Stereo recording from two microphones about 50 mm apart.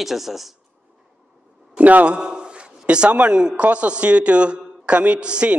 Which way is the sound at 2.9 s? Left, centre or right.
Right.